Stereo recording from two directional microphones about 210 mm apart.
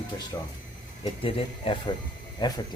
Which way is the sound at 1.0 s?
25° left (ahead or behind).